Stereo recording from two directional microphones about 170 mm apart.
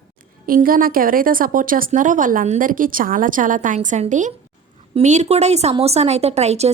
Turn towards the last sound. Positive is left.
turn(degrees=-40)  # may be behind; listen again after turning